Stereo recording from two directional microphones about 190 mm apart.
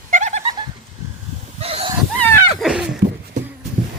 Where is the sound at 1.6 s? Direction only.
30° right (ahead or behind).